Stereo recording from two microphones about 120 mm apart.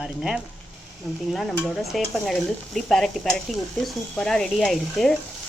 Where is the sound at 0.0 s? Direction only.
5° right (ahead or behind).